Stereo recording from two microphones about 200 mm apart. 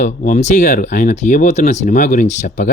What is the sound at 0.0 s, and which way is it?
Speech, 40° left (ahead or behind).